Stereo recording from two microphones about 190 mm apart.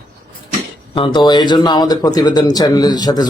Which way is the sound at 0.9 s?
25° left (ahead or behind).